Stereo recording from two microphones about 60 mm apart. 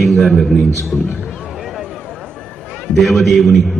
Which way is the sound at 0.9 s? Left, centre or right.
Centre.